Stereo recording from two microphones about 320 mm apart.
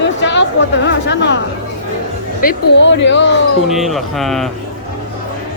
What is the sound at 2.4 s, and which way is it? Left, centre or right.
Speech, left.